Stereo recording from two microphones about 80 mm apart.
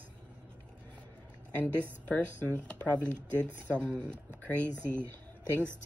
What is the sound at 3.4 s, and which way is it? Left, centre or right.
Speech, right.